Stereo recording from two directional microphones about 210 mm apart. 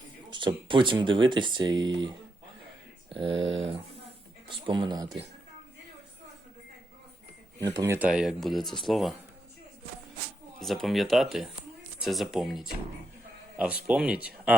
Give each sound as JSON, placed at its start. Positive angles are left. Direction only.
{"t": 0.3, "sound": "speech", "side_deg": -20}
{"t": 7.6, "sound": "speech", "side_deg": -15}
{"t": 10.6, "sound": "speech", "side_deg": 0}
{"t": 13.8, "sound": "speech", "side_deg": -5}